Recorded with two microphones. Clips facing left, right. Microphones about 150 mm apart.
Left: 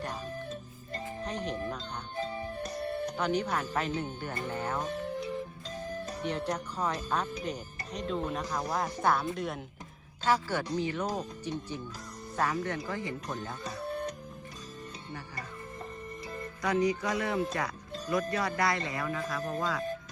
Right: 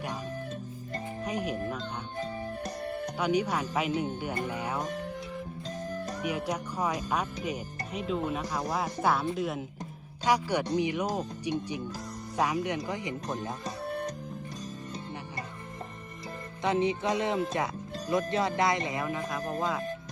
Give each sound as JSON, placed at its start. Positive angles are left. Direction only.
{"t": 1.2, "sound": "speech", "side_deg": -10}
{"t": 3.2, "sound": "speech", "side_deg": -10}
{"t": 6.2, "sound": "speech", "side_deg": -10}
{"t": 10.2, "sound": "speech", "side_deg": -15}
{"t": 16.6, "sound": "speech", "side_deg": -25}